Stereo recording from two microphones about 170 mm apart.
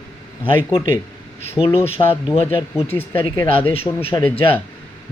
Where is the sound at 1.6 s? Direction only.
35° left (ahead or behind).